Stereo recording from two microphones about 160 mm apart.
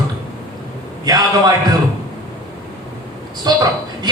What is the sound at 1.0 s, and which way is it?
Speech, 25° right (ahead or behind).